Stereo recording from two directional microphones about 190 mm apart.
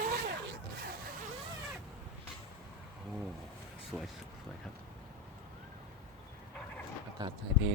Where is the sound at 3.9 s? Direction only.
Centre (ahead or behind).